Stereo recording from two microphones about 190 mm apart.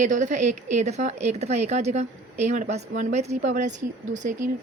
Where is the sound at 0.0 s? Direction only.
40° right (ahead or behind).